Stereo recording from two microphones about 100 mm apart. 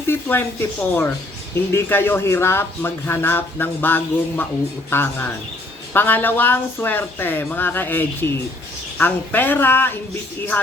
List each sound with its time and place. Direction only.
0.1 s speech: 20° left (ahead or behind)